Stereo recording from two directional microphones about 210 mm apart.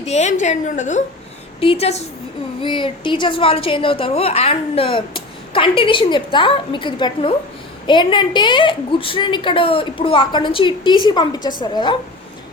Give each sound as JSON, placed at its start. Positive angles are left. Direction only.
{"t": 0.0, "sound": "a woman's voice", "side_deg": 30}